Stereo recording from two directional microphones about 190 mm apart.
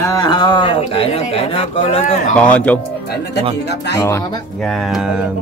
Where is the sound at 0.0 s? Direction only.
20° left (ahead or behind).